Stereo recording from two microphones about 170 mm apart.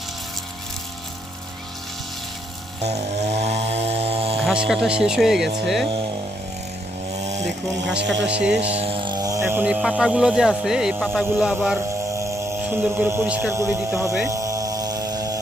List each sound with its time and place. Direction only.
2.8 s chainsaw: 40° right (ahead or behind)
4.4 s speech: 5° right (ahead or behind)
8.0 s speech: 90° right
8.3 s speech: 5° right (ahead or behind)
8.6 s speech: 35° right (ahead or behind); by 11.8 s 5° right (ahead or behind)
11.9 s speech: 15° right (ahead or behind)
14.3 s vehicle: 20° right (ahead or behind)